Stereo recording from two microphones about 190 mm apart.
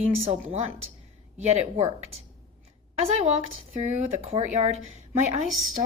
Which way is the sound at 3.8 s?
35° right (ahead or behind).